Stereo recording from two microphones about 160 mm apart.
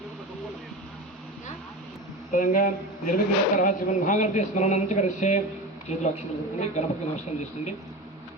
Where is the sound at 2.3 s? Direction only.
55° left (ahead or behind).